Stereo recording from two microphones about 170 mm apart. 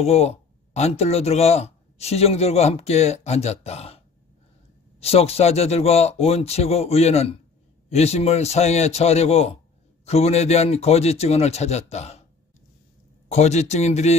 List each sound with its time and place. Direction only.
0.0 s speech: 35° left (ahead or behind)
5.0 s speech: 35° left (ahead or behind)
13.3 s speech: 40° left (ahead or behind)